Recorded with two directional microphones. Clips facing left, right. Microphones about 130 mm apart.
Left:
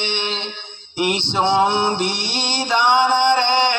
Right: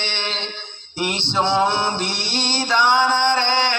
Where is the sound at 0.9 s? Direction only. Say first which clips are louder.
Left 2 dB; 15° left (ahead or behind).